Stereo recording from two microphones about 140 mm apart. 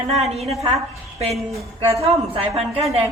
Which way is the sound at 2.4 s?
45° right (ahead or behind).